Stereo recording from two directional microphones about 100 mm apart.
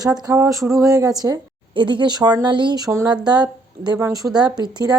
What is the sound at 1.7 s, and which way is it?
Speech, 55° right (ahead or behind).